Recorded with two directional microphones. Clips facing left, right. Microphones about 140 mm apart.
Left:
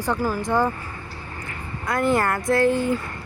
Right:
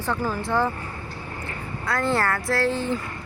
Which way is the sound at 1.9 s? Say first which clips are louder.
Left 3 dB; 15° left (ahead or behind).